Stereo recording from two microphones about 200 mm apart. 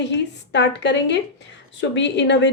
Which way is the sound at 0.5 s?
60° left (ahead or behind).